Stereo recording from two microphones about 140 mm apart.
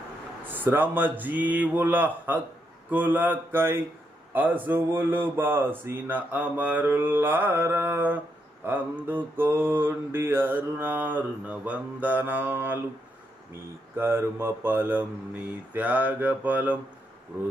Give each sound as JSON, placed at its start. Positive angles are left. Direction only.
{"t": 0.5, "sound": "mantra", "side_deg": -15}
{"t": 13.9, "sound": "mantra", "side_deg": -15}